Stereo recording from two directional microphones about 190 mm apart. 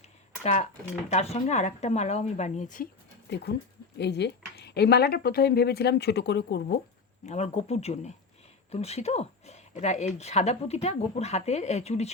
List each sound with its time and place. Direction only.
0.4 s speech: 35° left (ahead or behind)
3.2 s speech: 60° left (ahead or behind)
7.3 s speech: 35° left (ahead or behind)